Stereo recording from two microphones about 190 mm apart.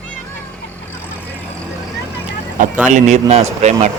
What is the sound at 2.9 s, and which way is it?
Speech, 40° right (ahead or behind).